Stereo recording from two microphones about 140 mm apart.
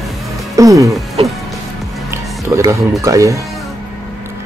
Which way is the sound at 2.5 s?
20° right (ahead or behind).